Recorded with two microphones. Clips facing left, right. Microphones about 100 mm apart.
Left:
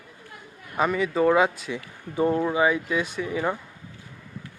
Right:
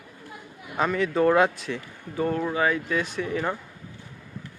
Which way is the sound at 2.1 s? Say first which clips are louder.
Left 3 dB; 20° left (ahead or behind).